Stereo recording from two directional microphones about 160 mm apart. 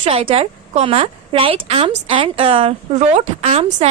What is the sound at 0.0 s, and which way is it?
A woman's voice, 35° right (ahead or behind).